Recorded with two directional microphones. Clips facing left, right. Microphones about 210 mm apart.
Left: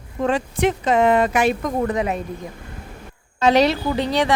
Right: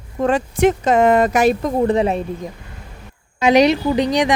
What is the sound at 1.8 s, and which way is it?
Speech, 30° right (ahead or behind).